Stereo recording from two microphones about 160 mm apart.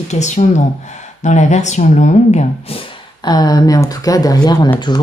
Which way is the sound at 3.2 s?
25° left (ahead or behind).